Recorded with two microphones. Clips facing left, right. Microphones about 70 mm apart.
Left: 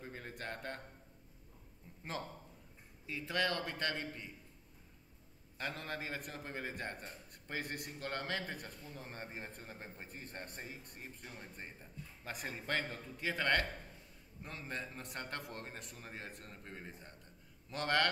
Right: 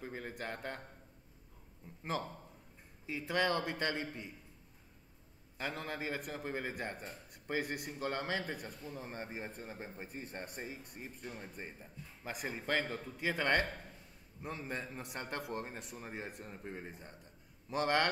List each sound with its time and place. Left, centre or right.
0.0 s a sound: centre
0.3 s a man's voice: centre
3.1 s a man's voice: centre
5.6 s a man's voice: centre